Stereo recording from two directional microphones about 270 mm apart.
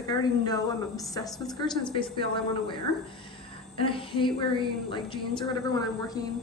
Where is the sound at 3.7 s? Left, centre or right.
Centre.